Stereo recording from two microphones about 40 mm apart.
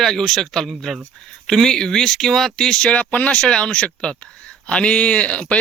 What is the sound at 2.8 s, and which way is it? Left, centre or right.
Speech, left.